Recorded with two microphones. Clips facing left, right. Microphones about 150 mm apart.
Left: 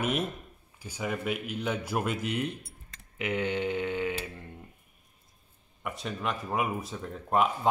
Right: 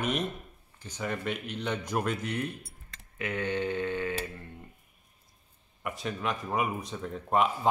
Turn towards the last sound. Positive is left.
turn(degrees=0)  # may be behind; listen again after turning